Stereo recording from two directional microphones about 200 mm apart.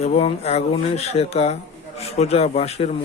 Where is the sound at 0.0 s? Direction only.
30° left (ahead or behind).